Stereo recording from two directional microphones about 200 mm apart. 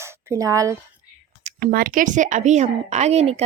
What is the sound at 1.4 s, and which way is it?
A woman's voice, 45° right (ahead or behind).